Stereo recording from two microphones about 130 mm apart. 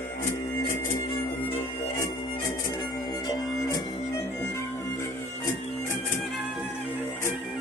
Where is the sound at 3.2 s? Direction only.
30° left (ahead or behind).